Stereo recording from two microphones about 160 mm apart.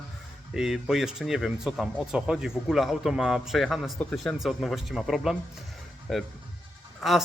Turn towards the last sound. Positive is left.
turn(degrees=0)  # may be behind; listen again after turning